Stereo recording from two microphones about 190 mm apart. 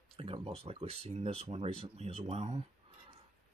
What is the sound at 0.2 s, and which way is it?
Speech, 30° right (ahead or behind).